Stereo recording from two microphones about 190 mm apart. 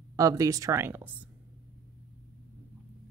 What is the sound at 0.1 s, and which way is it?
A woman's voice, 20° right (ahead or behind).